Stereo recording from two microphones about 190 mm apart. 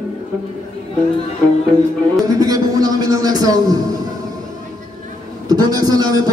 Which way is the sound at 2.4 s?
20° right (ahead or behind).